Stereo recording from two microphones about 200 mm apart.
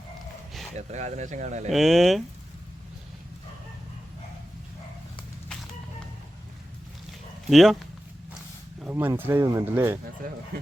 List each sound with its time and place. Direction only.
0.8 s speech: 35° right (ahead or behind)
1.7 s speech: centre (ahead or behind)
7.5 s speech: centre (ahead or behind)
8.8 s speech: 10° right (ahead or behind)
10.2 s speech: 45° right (ahead or behind)